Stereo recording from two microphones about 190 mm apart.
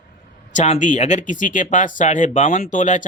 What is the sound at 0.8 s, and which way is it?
Speech, 40° left (ahead or behind).